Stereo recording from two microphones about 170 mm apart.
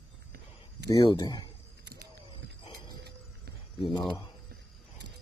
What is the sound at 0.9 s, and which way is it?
Speech, 30° left (ahead or behind).